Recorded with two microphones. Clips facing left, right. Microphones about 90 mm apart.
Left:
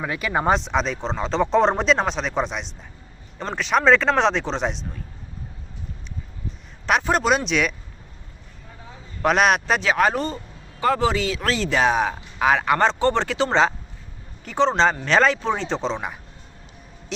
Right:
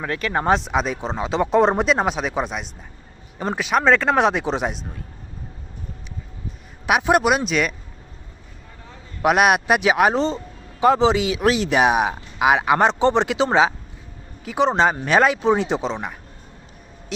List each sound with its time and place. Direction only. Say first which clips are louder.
0.0 s speech: even; 5° left (ahead or behind)
6.8 s speech: right 3 dB; 10° right (ahead or behind)
9.2 s speech: right 2 dB; 10° right (ahead or behind)